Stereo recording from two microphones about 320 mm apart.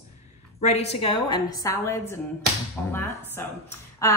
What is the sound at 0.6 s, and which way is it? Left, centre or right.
A woman's voice, centre.